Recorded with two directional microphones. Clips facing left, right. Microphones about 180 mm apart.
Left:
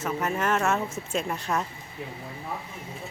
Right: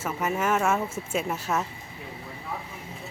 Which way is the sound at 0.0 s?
5° right (ahead or behind).